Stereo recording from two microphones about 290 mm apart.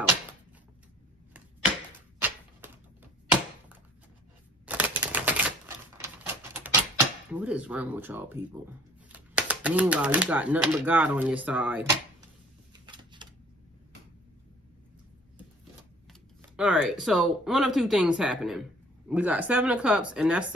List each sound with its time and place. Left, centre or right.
2.2 s typewriter: centre
4.6 s typewriter: centre
5.9 s a sound: centre
7.3 s speech: centre
12.8 s a sound: centre
16.1 s speech: centre